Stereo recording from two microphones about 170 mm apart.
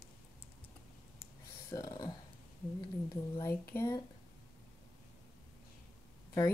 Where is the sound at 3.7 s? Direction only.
15° left (ahead or behind).